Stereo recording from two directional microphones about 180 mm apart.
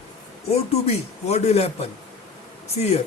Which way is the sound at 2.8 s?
35° left (ahead or behind).